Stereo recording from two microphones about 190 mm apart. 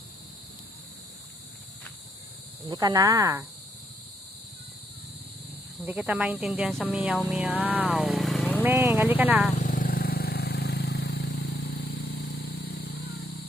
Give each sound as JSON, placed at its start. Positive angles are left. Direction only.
{"t": 2.6, "sound": "speech", "side_deg": -20}
{"t": 5.8, "sound": "speech", "side_deg": -10}
{"t": 8.6, "sound": "speech", "side_deg": -10}
{"t": 9.5, "sound": "vehicle", "side_deg": 40}